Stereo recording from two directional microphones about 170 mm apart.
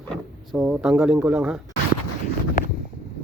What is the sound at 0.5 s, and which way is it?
Speech, 5° right (ahead or behind).